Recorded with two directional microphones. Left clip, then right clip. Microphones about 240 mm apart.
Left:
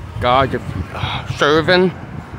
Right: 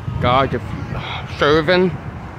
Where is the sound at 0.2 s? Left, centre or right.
Centre.